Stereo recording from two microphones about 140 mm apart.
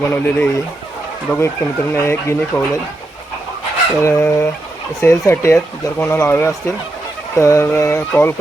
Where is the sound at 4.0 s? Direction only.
20° left (ahead or behind).